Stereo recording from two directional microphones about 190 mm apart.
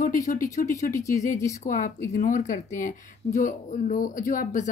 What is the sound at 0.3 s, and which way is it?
Speech, 45° left (ahead or behind).